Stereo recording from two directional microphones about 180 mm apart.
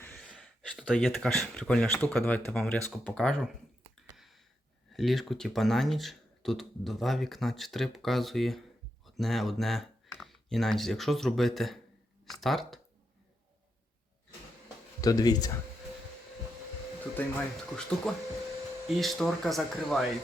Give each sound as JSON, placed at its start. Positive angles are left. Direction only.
{"t": 0.0, "sound": "speech", "side_deg": 10}
{"t": 4.9, "sound": "speech", "side_deg": 0}
{"t": 15.0, "sound": "speech", "side_deg": 20}
{"t": 17.2, "sound": "speech", "side_deg": 5}